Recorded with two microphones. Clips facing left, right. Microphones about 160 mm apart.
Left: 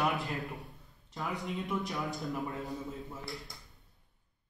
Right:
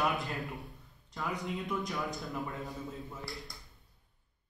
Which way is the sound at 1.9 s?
Centre (ahead or behind).